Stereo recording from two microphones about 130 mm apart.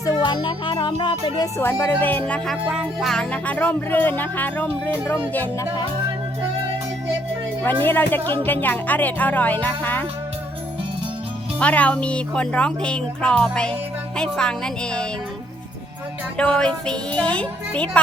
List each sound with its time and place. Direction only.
0.0 s music: 25° left (ahead or behind)
0.4 s music: 40° left (ahead or behind)
1.5 s speech: 20° left (ahead or behind)
2.6 s speech: 5° right (ahead or behind)
7.6 s speech: 15° left (ahead or behind)
11.6 s speech: 10° left (ahead or behind)
16.4 s speech: 5° left (ahead or behind)